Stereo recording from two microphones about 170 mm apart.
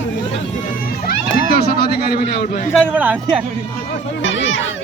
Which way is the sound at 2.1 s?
60° left (ahead or behind).